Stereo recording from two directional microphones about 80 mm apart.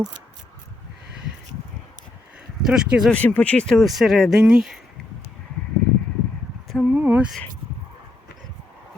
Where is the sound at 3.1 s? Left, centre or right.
Centre.